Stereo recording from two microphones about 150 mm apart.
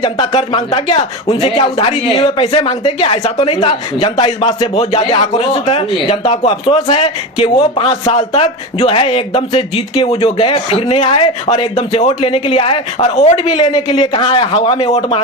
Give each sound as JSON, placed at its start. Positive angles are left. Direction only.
{"t": 0.0, "sound": "speech", "side_deg": 30}
{"t": 4.6, "sound": "speech", "side_deg": 45}